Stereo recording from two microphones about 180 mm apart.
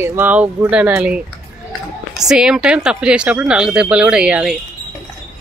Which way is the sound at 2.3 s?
5° right (ahead or behind).